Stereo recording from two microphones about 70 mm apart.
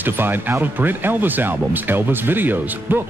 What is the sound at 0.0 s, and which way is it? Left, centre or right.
Speech, right.